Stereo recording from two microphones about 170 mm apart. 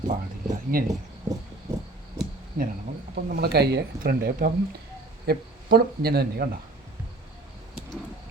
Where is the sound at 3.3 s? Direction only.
70° right (ahead or behind).